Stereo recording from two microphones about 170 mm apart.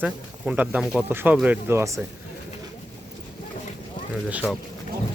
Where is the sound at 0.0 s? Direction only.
10° right (ahead or behind).